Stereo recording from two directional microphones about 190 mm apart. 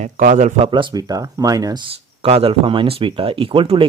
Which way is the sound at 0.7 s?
25° right (ahead or behind).